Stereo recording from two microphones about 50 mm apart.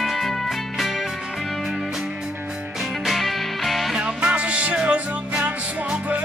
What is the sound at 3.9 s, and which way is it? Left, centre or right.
Music, centre.